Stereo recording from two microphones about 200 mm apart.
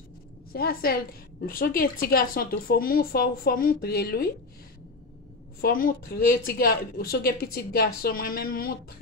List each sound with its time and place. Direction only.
0.5 s speech: 50° left (ahead or behind)
5.6 s speech: 45° left (ahead or behind)